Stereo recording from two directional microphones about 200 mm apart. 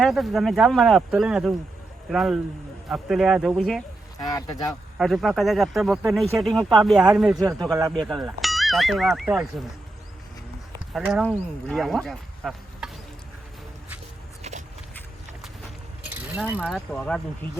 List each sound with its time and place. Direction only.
0.0 s speech: centre (ahead or behind)
4.2 s speech: 20° left (ahead or behind)
4.9 s speech: centre (ahead or behind)
7.3 s a man's voice: 20° right (ahead or behind)
7.9 s speech: centre (ahead or behind)
10.9 s speech: centre (ahead or behind)
12.4 s insect: 5° right (ahead or behind)
16.0 s pulleys: 10° right (ahead or behind)